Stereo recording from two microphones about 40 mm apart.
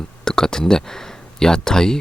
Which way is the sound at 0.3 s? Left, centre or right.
Centre.